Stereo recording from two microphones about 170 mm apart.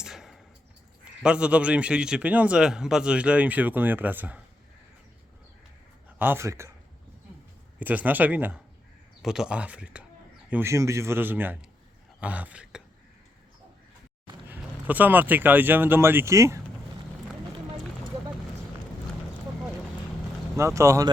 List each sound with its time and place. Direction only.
0.0 s a sound: centre (ahead or behind)
1.2 s a man's voice: 5° right (ahead or behind)
6.1 s a man's voice: 10° right (ahead or behind)
7.8 s a man's voice: 10° right (ahead or behind)
14.4 s speech: 10° right (ahead or behind)
20.6 s a man's voice: 15° right (ahead or behind)